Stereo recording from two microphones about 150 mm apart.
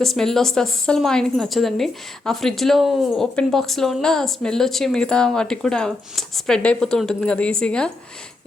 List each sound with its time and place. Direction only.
0.0 s a woman's voice: centre (ahead or behind)